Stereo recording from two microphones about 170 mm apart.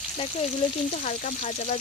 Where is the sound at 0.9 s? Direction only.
45° left (ahead or behind).